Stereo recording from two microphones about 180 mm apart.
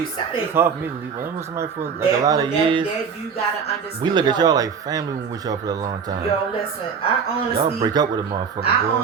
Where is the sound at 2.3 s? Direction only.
25° right (ahead or behind).